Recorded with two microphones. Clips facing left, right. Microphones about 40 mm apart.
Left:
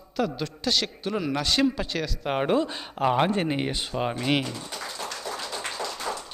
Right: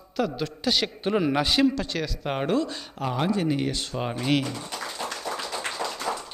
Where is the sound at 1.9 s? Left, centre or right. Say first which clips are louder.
Left 1 dB; centre.